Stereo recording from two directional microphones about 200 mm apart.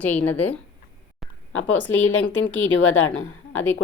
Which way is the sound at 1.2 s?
Centre (ahead or behind).